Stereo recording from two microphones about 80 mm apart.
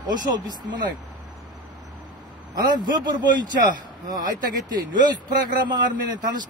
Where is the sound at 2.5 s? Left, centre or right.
Right.